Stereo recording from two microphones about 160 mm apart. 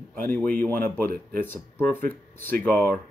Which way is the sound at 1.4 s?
10° left (ahead or behind).